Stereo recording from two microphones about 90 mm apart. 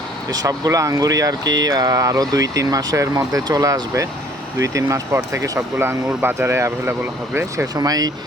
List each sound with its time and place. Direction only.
0.3 s speech: 45° right (ahead or behind)
7.8 s speech: 45° right (ahead or behind)